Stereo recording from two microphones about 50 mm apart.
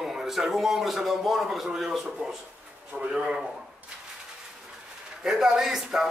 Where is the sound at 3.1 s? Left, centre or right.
Centre.